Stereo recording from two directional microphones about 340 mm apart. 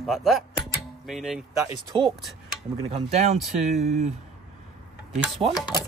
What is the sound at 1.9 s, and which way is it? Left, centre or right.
Speech, centre.